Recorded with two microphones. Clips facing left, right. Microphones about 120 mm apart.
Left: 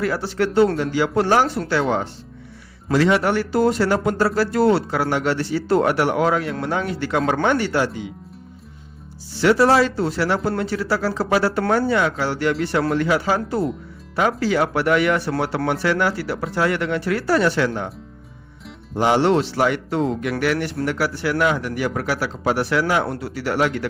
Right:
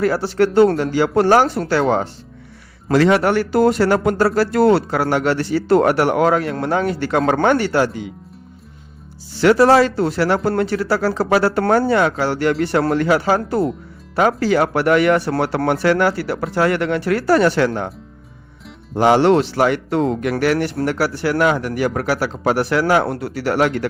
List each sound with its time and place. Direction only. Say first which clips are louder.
0.0 s speech: right 5 dB; 40° right (ahead or behind)
5.6 s speech: right 4 dB; 65° right (ahead or behind)
5.9 s speech: right 3 dB; 50° right (ahead or behind)
9.4 s speech: right 4 dB; 50° right (ahead or behind)
10.1 s speech: right 4 dB; 55° right (ahead or behind)
12.8 s speech: right 2 dB; 45° right (ahead or behind)
19.0 s speech: right 4 dB; 55° right (ahead or behind)
20.3 s speech: right 4 dB; 40° right (ahead or behind)